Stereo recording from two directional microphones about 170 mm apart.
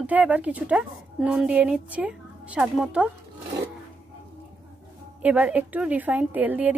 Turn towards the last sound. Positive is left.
turn(degrees=-10)  # may be behind; listen again after turning